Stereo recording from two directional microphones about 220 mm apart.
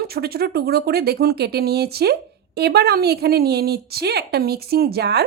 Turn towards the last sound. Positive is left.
turn(degrees=-45)  # may be behind; listen again after turning